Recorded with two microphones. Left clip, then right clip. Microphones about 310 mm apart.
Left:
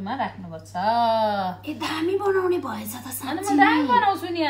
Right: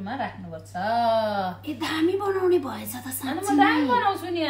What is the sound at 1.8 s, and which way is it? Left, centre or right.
Speech, centre.